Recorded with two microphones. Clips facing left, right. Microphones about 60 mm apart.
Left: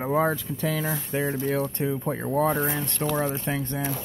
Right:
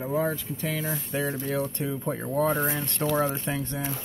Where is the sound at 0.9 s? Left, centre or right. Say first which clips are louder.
Left 2 dB; left.